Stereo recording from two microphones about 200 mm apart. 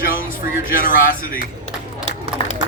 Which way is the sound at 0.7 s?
45° left (ahead or behind).